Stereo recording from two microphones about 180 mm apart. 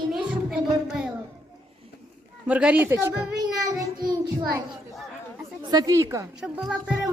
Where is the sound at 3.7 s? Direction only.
20° right (ahead or behind).